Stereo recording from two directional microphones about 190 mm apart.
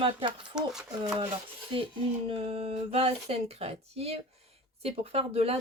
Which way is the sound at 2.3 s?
30° right (ahead or behind).